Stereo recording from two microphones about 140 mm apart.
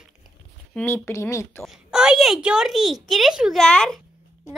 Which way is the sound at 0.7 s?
15° left (ahead or behind).